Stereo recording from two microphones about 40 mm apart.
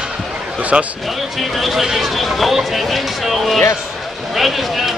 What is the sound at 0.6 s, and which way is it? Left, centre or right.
Speech, right.